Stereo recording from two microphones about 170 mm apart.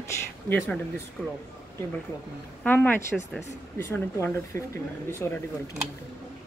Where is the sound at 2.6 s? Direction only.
10° left (ahead or behind).